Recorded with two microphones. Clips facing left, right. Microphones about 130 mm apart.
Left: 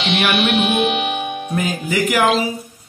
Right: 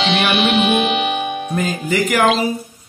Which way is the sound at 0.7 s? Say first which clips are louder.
Right 1 dB; 90° right.